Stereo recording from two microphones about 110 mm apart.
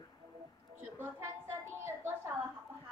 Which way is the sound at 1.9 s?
20° right (ahead or behind).